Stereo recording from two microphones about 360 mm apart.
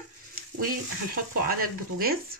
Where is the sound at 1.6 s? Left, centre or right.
Right.